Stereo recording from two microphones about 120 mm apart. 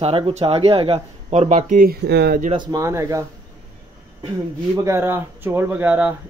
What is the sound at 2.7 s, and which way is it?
Speech, 25° right (ahead or behind).